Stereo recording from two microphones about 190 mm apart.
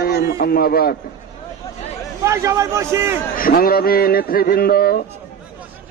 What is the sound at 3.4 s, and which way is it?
A man's voice, 50° left (ahead or behind).